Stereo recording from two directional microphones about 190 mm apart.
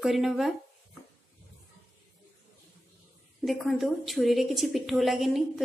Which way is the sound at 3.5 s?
Centre (ahead or behind).